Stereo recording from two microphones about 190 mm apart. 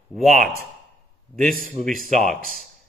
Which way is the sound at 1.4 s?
45° right (ahead or behind).